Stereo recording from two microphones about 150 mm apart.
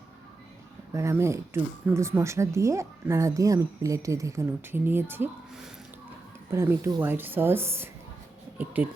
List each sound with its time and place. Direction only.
0.9 s speech: 20° right (ahead or behind)
6.5 s a woman's voice: 15° right (ahead or behind)